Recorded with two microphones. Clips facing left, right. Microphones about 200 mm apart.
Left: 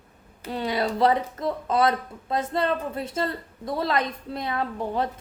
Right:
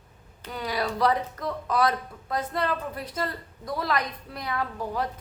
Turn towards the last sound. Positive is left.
turn(degrees=25)  # may be behind; listen again after turning